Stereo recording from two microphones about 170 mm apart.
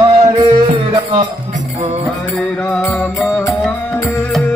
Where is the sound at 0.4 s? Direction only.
30° right (ahead or behind).